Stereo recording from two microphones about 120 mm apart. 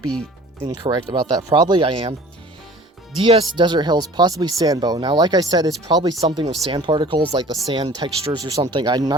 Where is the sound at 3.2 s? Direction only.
50° right (ahead or behind).